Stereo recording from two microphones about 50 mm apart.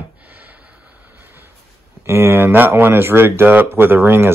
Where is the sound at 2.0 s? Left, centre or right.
Right.